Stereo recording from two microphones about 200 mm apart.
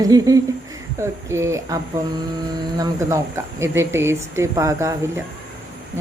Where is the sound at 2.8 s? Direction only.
15° right (ahead or behind).